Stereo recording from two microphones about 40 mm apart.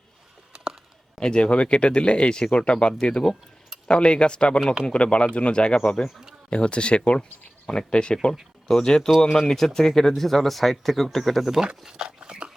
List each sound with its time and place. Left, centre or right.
0.5 s a sound: centre
1.2 s speech: left
9.4 s speech: centre
11.9 s dog: centre